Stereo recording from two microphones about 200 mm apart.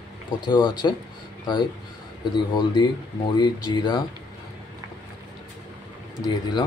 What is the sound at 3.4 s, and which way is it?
Speech, 20° left (ahead or behind).